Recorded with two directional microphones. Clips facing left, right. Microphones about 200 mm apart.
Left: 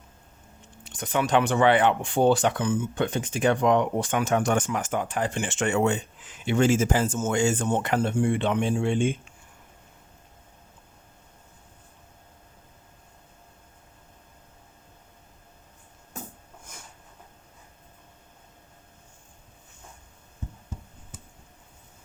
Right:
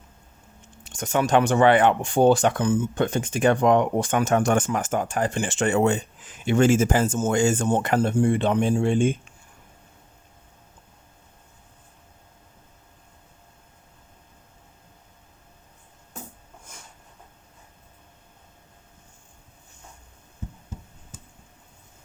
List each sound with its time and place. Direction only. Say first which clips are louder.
0.9 s speech: right 3 dB; 45° right (ahead or behind)
6.4 s speech: right 3 dB; 50° right (ahead or behind)
7.2 s speech: right 3 dB; 35° right (ahead or behind)
7.4 s speech: right 3 dB; 45° right (ahead or behind)